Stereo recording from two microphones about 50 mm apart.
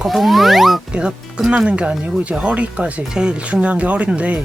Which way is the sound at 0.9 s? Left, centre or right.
Centre.